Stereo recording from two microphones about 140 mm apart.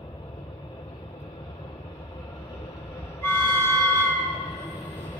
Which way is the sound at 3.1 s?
15° left (ahead or behind).